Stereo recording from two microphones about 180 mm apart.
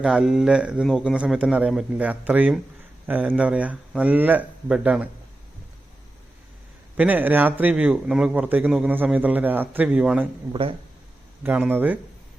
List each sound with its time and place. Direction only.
0.0 s a man's voice: 5° right (ahead or behind)
6.9 s a man's voice: 10° right (ahead or behind)
10.5 s speech: 30° right (ahead or behind)
11.4 s a man's voice: 10° right (ahead or behind)